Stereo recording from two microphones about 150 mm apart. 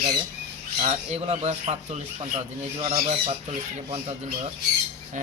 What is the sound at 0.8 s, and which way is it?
Squawk, 45° right (ahead or behind).